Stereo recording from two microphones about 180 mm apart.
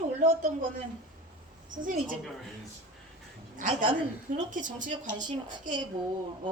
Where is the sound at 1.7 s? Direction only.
50° right (ahead or behind).